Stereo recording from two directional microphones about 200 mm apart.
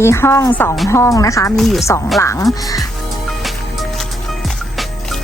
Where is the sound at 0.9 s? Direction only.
15° left (ahead or behind).